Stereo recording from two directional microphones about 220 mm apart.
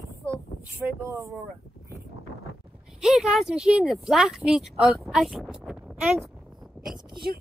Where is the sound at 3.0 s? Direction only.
5° right (ahead or behind).